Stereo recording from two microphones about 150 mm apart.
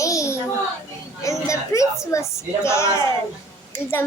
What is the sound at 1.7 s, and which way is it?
A child's voice, 20° left (ahead or behind).